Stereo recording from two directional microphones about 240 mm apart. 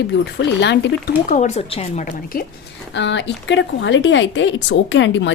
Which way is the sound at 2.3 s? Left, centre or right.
Left.